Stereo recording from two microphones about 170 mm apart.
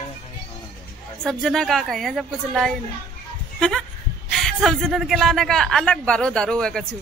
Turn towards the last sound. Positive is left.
turn(degrees=5)  # may be behind; listen again after turning